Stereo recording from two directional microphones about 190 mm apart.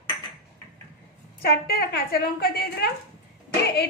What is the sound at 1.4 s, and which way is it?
A woman's voice, 55° left (ahead or behind).